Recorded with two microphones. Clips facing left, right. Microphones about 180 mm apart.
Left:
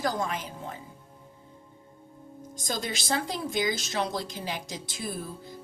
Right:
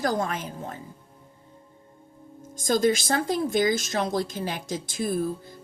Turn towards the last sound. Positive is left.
turn(degrees=-50)  # may be behind; listen again after turning